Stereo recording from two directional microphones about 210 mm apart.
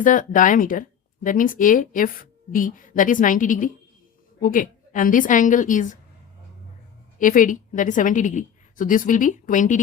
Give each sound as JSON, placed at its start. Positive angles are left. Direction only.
{"t": 0.0, "sound": "speech", "side_deg": 40}
{"t": 7.2, "sound": "speech", "side_deg": 40}